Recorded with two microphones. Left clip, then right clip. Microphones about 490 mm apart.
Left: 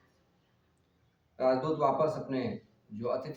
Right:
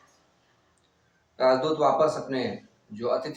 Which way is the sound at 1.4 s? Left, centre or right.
Left.